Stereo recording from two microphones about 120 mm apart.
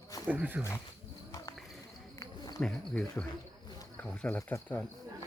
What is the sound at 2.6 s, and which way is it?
Speech, 5° left (ahead or behind).